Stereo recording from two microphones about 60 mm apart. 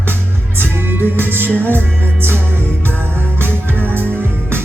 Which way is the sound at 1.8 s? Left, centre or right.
Right.